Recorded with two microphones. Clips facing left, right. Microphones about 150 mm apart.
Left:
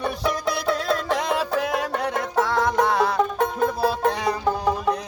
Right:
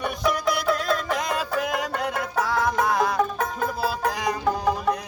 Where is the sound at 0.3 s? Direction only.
25° left (ahead or behind).